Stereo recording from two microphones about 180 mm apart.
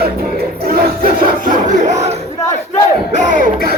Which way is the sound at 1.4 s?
40° right (ahead or behind).